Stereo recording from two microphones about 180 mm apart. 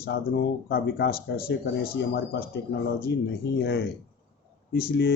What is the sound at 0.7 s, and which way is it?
Speech, 60° left (ahead or behind).